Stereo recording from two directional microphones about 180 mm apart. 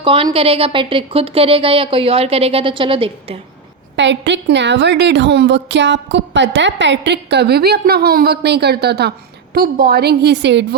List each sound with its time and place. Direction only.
0.0 s a woman's voice: 30° right (ahead or behind)
3.9 s a woman's voice: 80° right